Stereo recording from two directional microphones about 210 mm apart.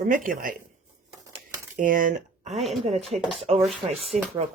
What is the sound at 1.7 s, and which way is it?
Speech, 40° right (ahead or behind).